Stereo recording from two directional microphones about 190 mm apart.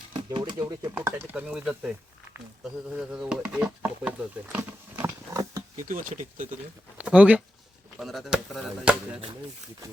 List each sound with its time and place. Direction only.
0.1 s speech: 25° right (ahead or behind)
0.9 s speech: 10° right (ahead or behind)
2.9 s speech: 5° right (ahead or behind)
5.7 s speech: 45° right (ahead or behind)
7.0 s speech: 5° right (ahead or behind)